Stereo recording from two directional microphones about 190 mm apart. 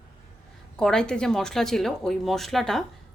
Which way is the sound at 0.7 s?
5° left (ahead or behind).